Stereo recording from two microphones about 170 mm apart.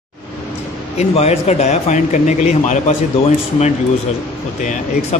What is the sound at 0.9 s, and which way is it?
Speech, 40° left (ahead or behind).